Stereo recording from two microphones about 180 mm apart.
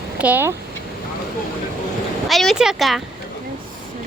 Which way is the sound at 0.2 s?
10° right (ahead or behind).